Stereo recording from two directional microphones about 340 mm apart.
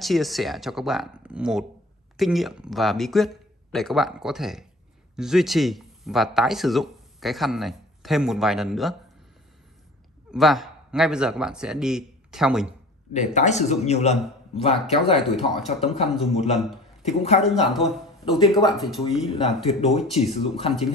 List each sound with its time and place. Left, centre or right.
0.0 s speech: centre
10.3 s a man's voice: centre
13.1 s a man's voice: left
15.3 s speech: centre
17.0 s a man's voice: centre
17.4 s speech: centre
19.3 s speech: centre